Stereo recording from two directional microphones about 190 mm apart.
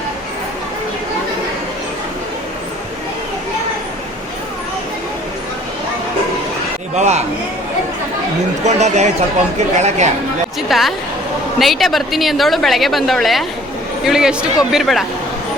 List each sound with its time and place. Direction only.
6.9 s a man's voice: 35° right (ahead or behind)
8.6 s speech: 35° right (ahead or behind)
10.7 s a woman's voice: centre (ahead or behind)